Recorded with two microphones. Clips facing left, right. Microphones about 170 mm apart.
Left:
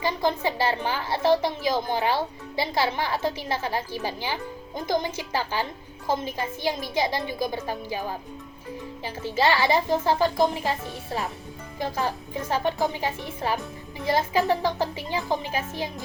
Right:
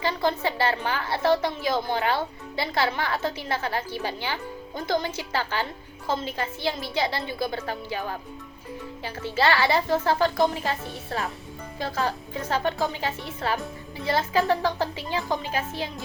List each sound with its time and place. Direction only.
0.0 s a woman's voice: 15° left (ahead or behind)